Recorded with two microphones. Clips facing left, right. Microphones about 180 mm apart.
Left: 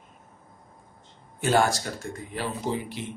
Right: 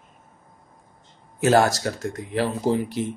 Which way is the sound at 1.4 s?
75° right (ahead or behind).